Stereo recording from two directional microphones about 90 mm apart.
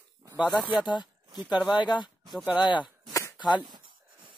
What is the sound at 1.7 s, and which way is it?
Speech, 60° left (ahead or behind).